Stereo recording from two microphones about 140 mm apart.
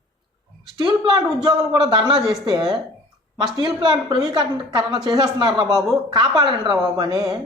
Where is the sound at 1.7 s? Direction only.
35° right (ahead or behind).